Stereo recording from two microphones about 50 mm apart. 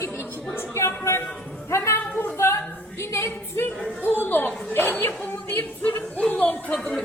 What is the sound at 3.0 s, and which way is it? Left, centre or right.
Speech, left.